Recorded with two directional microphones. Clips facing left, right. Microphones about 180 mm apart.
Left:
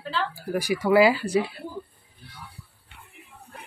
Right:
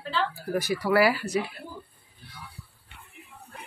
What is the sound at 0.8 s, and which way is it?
Speech, 20° left (ahead or behind).